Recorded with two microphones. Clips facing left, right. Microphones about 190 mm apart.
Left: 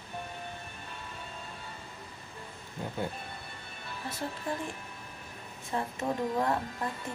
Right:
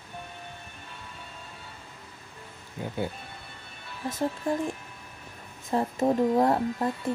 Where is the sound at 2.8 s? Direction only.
5° right (ahead or behind).